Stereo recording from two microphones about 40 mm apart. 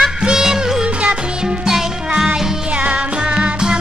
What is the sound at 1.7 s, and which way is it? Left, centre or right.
Music, centre.